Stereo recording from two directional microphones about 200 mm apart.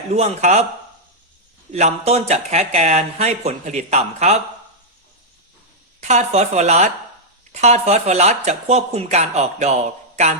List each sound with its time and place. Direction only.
0.1 s speech: 35° right (ahead or behind)
1.7 s speech: 35° right (ahead or behind)
6.0 s speech: 35° right (ahead or behind)